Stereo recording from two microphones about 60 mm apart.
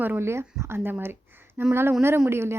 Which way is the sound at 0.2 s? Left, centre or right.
Right.